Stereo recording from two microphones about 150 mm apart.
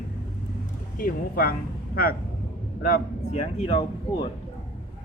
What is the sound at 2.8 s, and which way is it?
Speech, 70° left (ahead or behind).